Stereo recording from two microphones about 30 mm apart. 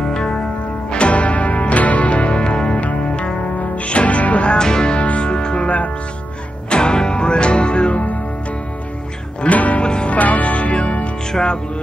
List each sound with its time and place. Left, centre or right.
0.0 s music: left
0.8 s music: left
3.7 s music: left
4.6 s music: left
4.9 s music: left
5.3 s music: left
6.7 s music: left
9.5 s music: left
9.8 s music: left
10.0 s music: left